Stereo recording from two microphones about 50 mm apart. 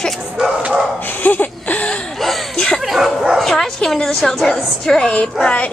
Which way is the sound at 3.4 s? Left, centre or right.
Centre.